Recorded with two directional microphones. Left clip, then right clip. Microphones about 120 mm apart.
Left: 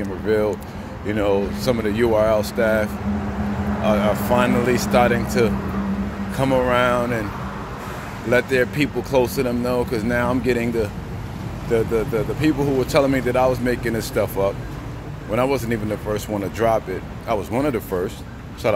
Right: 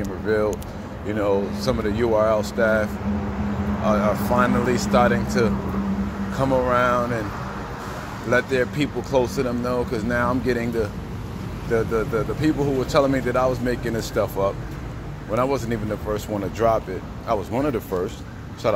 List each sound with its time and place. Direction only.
0.3 s speech: 25° left (ahead or behind)
8.3 s speech: 30° left (ahead or behind)